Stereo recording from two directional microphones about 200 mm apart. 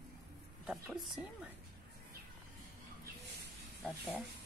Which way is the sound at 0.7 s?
5° right (ahead or behind).